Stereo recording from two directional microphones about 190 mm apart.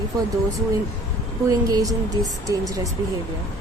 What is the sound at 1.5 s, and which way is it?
A woman's voice, 20° right (ahead or behind).